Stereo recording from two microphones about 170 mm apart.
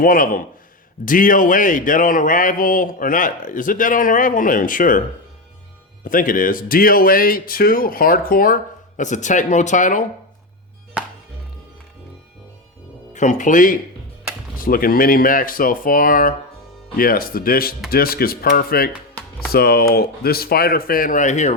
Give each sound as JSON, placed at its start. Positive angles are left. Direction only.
{"t": 0.0, "sound": "speech", "side_deg": 55}
{"t": 6.1, "sound": "speech", "side_deg": 55}
{"t": 9.0, "sound": "speech", "side_deg": 45}
{"t": 13.1, "sound": "speech", "side_deg": 45}